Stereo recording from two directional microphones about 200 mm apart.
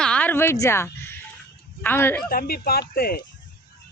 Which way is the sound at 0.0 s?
5° left (ahead or behind).